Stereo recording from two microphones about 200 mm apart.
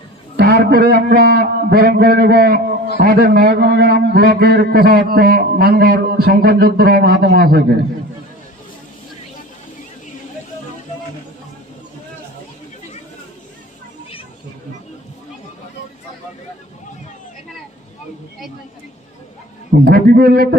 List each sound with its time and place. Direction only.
0.3 s a man's voice: 50° right (ahead or behind)
19.8 s a man's voice: 50° right (ahead or behind)